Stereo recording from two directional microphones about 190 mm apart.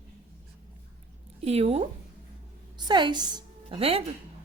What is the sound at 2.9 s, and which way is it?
Speech, 25° right (ahead or behind).